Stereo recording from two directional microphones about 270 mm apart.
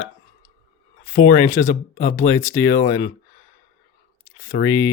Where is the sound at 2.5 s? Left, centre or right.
Left.